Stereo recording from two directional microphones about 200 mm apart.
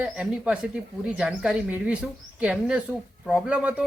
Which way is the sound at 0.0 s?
5° right (ahead or behind).